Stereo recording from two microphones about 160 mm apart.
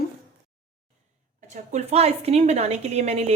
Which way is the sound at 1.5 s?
45° right (ahead or behind).